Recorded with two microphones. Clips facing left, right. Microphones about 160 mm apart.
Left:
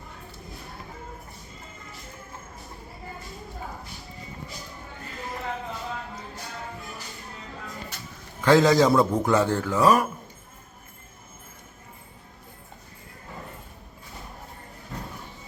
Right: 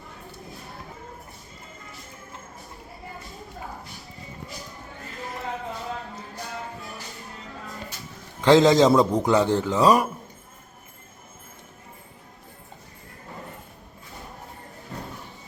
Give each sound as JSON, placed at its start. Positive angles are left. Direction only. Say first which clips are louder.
{"t": 8.4, "sound": "a man's voice", "louder": "right 2 dB", "side_deg": -20}